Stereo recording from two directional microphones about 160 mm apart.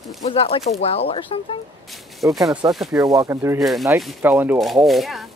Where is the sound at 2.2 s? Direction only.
20° right (ahead or behind).